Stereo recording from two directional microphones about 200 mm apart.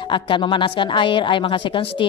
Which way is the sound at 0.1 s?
25° left (ahead or behind).